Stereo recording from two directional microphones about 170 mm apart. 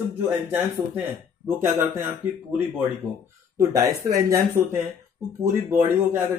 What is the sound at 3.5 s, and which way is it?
A man's voice, 20° right (ahead or behind).